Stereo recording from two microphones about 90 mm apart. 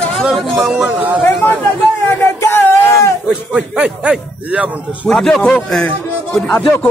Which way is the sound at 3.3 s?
15° right (ahead or behind).